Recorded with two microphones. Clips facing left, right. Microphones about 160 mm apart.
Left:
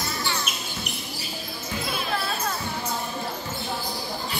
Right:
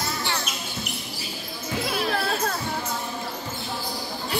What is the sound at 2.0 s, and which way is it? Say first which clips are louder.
Basketball bounce: right 4 dB; 80° right.